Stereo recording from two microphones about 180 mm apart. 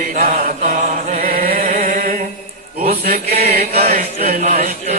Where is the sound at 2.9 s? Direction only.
55° right (ahead or behind).